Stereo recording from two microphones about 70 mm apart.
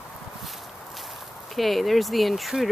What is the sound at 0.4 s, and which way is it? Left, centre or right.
Walk, centre.